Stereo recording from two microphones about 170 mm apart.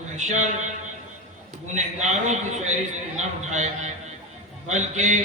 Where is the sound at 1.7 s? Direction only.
45° right (ahead or behind).